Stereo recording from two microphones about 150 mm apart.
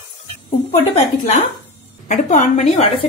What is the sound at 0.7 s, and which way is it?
A woman's voice, 45° left (ahead or behind).